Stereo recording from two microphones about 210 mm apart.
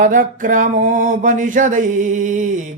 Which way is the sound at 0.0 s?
40° right (ahead or behind).